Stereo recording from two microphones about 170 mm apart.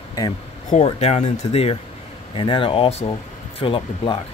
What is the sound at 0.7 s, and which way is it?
Speech, 40° left (ahead or behind).